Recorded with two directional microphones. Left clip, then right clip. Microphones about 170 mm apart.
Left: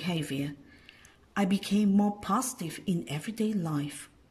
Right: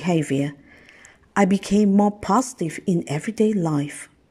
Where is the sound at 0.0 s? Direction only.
40° right (ahead or behind).